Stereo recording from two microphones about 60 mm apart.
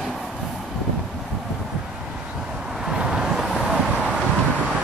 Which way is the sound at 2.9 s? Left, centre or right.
Centre.